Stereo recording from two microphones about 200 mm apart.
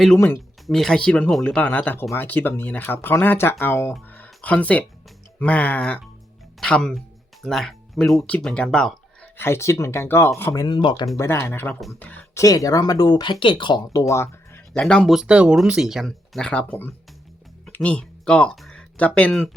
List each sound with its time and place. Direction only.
0.2 s speech: 5° left (ahead or behind)
9.5 s speech: 15° left (ahead or behind)
11.2 s speech: 15° left (ahead or behind)
14.1 s a sound: 15° left (ahead or behind)
14.7 s speech: 5° left (ahead or behind)